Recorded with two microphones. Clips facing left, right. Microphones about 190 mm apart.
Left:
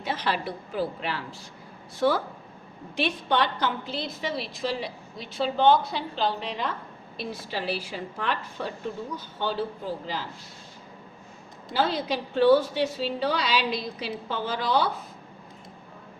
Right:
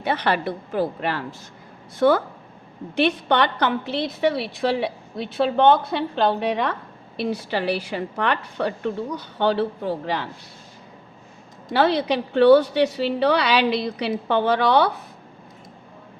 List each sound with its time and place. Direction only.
0.0 s a woman's voice: 65° right (ahead or behind)
11.7 s a woman's voice: 70° right (ahead or behind)